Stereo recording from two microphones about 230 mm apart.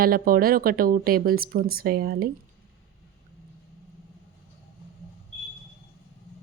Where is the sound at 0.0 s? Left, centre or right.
Right.